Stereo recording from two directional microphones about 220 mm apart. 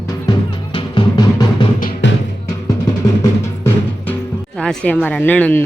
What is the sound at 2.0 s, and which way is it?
Music, 55° left (ahead or behind).